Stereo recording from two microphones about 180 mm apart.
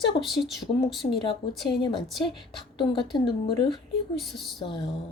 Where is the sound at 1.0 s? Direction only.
35° left (ahead or behind).